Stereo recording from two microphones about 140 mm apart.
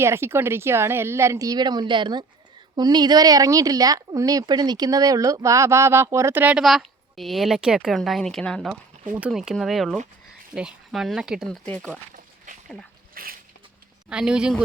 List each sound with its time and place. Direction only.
0.0 s speech: 20° right (ahead or behind); by 8.8 s 5° left (ahead or behind)
9.0 s speech: 15° right (ahead or behind)
9.3 s speech: centre (ahead or behind)
13.2 s a sound: 90° right
14.1 s speech: 5° right (ahead or behind)